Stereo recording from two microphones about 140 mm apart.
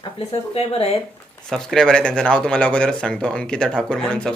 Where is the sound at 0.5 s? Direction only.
45° left (ahead or behind).